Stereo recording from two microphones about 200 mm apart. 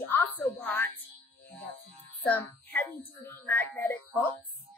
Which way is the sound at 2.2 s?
10° left (ahead or behind).